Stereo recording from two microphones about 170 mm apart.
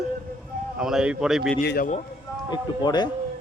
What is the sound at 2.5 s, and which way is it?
Speech, 25° left (ahead or behind).